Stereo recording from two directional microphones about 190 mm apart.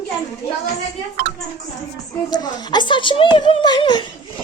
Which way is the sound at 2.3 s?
20° left (ahead or behind).